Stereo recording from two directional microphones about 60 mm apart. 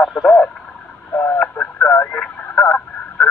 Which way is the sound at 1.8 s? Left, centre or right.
Left.